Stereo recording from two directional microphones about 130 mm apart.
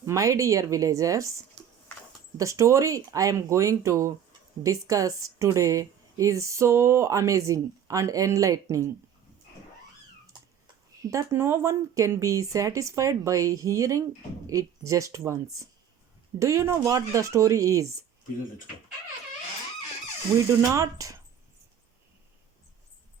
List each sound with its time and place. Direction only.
0.0 s a woman's voice: 25° right (ahead or behind)
1.6 s a sound: 5° left (ahead or behind)
2.4 s a woman's voice: 25° right (ahead or behind)
11.1 s a woman's voice: 25° right (ahead or behind)
20.6 s a woman's voice: 25° right (ahead or behind)